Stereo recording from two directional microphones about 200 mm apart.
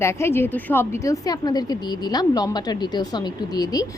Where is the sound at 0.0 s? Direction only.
15° left (ahead or behind).